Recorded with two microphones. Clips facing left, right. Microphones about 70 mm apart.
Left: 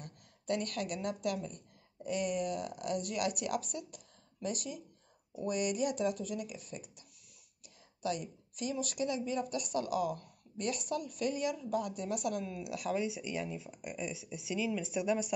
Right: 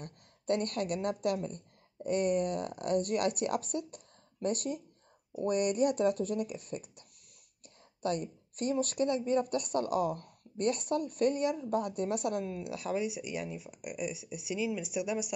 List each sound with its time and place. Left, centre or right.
0.0 s a woman's voice: right
12.9 s speech: centre